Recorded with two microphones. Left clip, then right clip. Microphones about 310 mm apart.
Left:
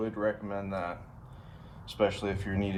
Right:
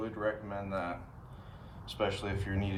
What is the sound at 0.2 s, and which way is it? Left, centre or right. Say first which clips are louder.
Speech: left 1 dB; left.